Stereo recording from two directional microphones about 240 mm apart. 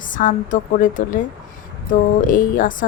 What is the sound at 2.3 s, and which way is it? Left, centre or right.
Speech, left.